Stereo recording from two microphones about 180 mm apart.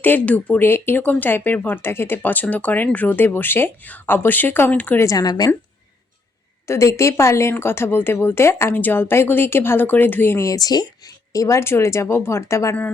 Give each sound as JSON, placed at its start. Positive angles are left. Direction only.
{"t": 0.0, "sound": "speech", "side_deg": 10}
{"t": 6.7, "sound": "speech", "side_deg": 15}